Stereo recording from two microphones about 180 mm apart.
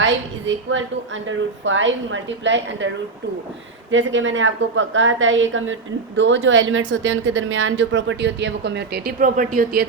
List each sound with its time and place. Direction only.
0.0 s a woman's voice: 90° right
3.9 s speech: 90° right; by 9.8 s 50° right (ahead or behind)